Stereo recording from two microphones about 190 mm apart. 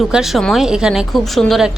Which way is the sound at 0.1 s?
Centre (ahead or behind).